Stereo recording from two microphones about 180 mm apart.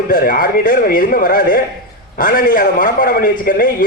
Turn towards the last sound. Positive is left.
turn(degrees=50)  # may be behind; listen again after turning